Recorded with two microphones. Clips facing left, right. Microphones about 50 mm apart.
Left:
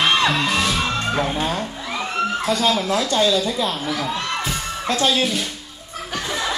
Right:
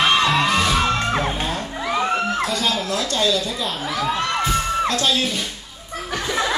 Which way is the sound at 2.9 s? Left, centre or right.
Centre.